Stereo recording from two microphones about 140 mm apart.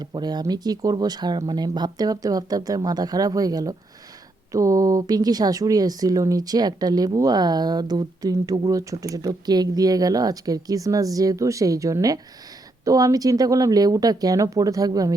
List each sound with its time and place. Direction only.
0.0 s speech: 30° right (ahead or behind)